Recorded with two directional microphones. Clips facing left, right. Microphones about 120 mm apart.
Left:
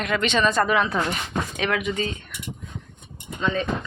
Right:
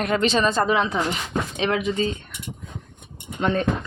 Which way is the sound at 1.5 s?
30° right (ahead or behind).